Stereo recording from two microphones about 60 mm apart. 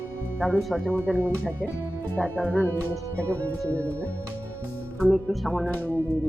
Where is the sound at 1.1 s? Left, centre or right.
Left.